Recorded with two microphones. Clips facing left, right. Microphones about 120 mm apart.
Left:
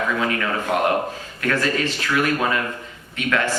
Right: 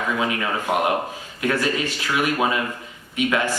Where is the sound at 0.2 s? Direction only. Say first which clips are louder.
Left 1 dB; 15° right (ahead or behind).